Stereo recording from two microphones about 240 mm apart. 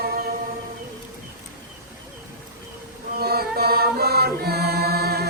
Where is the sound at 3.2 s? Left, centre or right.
Right.